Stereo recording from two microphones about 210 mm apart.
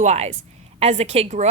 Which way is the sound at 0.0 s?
30° right (ahead or behind).